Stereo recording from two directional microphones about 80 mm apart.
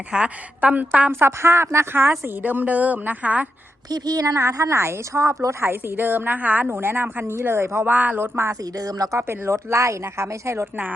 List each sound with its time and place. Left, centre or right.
0.1 s a woman's voice: centre
1.1 s a woman's voice: right
3.8 s a woman's voice: right
4.4 s a woman's voice: right
8.7 s a woman's voice: right
9.1 s a woman's voice: right